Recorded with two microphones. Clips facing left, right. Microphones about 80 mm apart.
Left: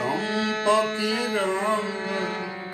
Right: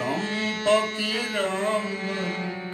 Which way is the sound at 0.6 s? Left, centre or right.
Centre.